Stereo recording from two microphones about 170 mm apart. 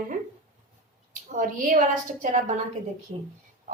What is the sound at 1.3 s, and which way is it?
A woman's voice, 50° right (ahead or behind).